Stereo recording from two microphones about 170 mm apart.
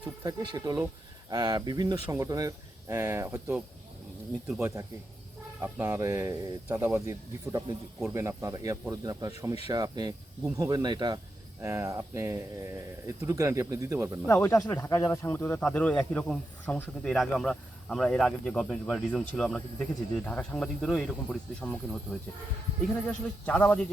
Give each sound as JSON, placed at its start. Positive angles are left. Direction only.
{"t": 0.0, "sound": "speech", "side_deg": -20}
{"t": 14.3, "sound": "speech", "side_deg": 15}